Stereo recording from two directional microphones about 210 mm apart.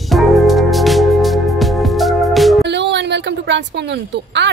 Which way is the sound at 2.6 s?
55° right (ahead or behind).